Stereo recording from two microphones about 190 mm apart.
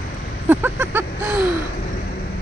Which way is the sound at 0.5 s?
10° right (ahead or behind).